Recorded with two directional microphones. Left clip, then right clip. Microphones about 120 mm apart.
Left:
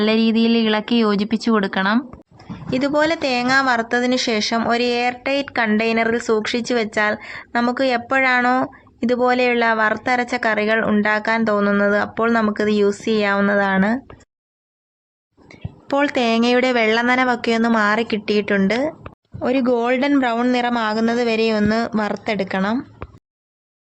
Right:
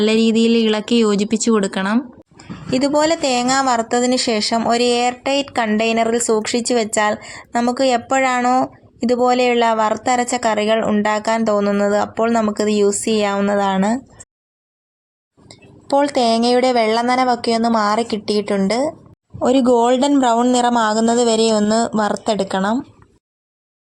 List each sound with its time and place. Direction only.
0.0 s speech: 25° right (ahead or behind)
2.6 s a woman's voice: 50° right (ahead or behind)
15.4 s a woman's voice: 35° right (ahead or behind)
19.7 s a woman's voice: 55° right (ahead or behind)
20.7 s speech: 15° right (ahead or behind)
21.2 s a woman's voice: 60° right (ahead or behind)
21.5 s speech: 10° right (ahead or behind)
21.9 s a woman's voice: 55° right (ahead or behind)
22.4 s speech: 10° right (ahead or behind)